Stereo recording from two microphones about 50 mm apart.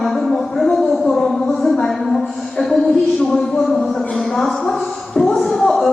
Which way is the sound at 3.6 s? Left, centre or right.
Centre.